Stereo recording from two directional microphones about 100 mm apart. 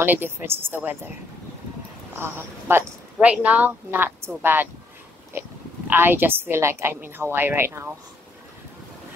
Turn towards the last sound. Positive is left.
turn(degrees=-25)  # may be behind; listen again after turning